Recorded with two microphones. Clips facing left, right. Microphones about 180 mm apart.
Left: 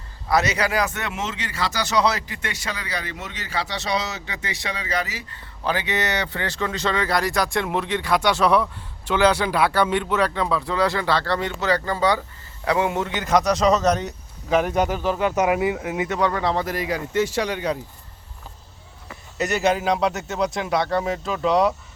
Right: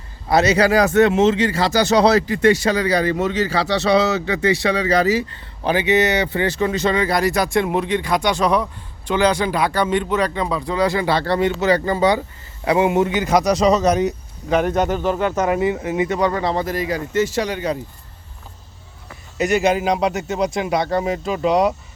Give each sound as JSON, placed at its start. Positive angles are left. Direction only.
{"t": 0.3, "sound": "speech", "side_deg": -30}
{"t": 5.6, "sound": "speech", "side_deg": -15}
{"t": 9.6, "sound": "speech", "side_deg": -15}
{"t": 9.9, "sound": "speech", "side_deg": 5}
{"t": 10.9, "sound": "speech", "side_deg": -15}
{"t": 14.5, "sound": "speech", "side_deg": 5}
{"t": 16.0, "sound": "speech", "side_deg": -5}
{"t": 16.6, "sound": "speech", "side_deg": 10}
{"t": 17.1, "sound": "speech", "side_deg": -5}
{"t": 19.6, "sound": "speech", "side_deg": 0}
{"t": 20.8, "sound": "speech", "side_deg": -15}
{"t": 21.1, "sound": "speech", "side_deg": 0}